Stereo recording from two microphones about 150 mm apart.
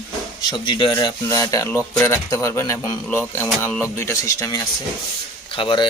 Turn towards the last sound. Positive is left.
turn(degrees=35)  # may be behind; listen again after turning